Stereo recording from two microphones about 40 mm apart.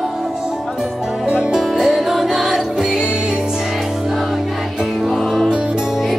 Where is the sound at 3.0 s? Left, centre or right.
Right.